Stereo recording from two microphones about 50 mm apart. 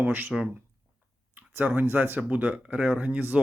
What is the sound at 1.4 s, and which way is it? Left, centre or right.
Speech, right.